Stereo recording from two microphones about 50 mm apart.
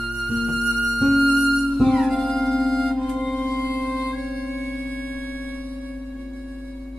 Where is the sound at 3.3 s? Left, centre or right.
Centre.